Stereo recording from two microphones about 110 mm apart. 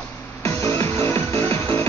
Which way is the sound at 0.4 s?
30° left (ahead or behind).